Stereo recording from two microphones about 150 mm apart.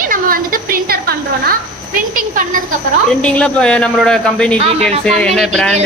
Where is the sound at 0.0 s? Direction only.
70° right (ahead or behind).